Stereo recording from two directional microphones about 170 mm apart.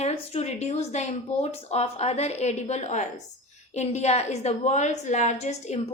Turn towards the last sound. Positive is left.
turn(degrees=40)  # may be behind; listen again after turning